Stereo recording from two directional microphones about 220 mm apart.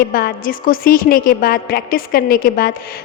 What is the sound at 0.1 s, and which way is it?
A woman's voice, 45° left (ahead or behind).